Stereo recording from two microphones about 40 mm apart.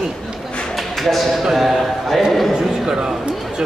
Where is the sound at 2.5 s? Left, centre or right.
Centre.